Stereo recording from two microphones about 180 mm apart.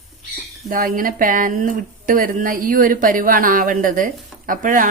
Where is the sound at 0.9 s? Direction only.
50° right (ahead or behind).